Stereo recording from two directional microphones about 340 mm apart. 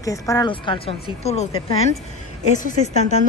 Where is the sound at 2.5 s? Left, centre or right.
Left.